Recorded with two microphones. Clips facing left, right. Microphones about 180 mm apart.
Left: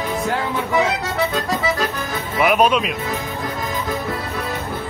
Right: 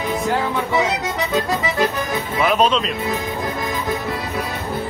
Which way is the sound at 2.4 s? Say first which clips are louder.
Left 2 dB; 10° left (ahead or behind).